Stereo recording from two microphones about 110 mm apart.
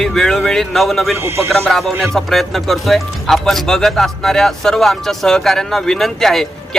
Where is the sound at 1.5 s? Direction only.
Centre (ahead or behind).